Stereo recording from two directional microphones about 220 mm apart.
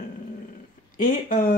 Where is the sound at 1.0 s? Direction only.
40° left (ahead or behind).